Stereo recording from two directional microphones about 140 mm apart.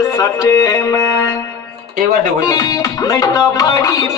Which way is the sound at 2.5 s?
25° left (ahead or behind).